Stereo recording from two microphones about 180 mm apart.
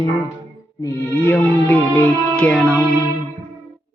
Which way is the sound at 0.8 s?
15° left (ahead or behind).